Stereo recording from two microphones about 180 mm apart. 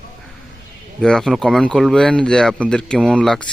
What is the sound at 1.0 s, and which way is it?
Speech, centre (ahead or behind).